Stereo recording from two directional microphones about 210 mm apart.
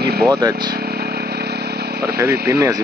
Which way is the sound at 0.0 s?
50° right (ahead or behind).